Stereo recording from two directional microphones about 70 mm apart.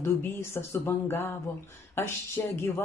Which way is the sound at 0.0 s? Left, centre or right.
Left.